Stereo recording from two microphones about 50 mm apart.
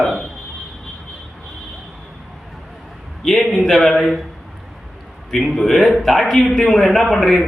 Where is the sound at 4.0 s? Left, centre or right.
Centre.